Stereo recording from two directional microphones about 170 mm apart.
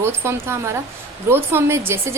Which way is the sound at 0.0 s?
15° right (ahead or behind).